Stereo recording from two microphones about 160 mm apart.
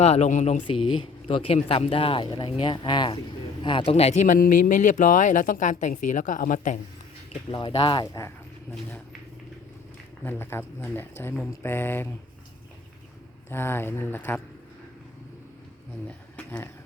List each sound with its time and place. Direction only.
0.0 s speech: 40° left (ahead or behind)
1.6 s speech: 35° left (ahead or behind); by 6.7 s 55° left (ahead or behind)
7.5 s speech: 30° left (ahead or behind)
10.2 s speech: 15° left (ahead or behind)
13.5 s speech: 15° left (ahead or behind)
16.0 s a sound: 10° left (ahead or behind)